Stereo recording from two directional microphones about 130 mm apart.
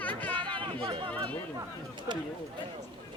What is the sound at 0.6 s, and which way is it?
Speech, 40° right (ahead or behind).